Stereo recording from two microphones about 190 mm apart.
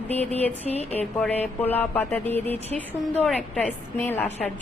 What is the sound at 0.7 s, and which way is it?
Speech, 35° left (ahead or behind).